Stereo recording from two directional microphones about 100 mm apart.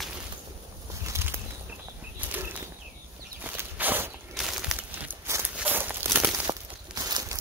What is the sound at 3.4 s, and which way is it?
Walk, 20° right (ahead or behind).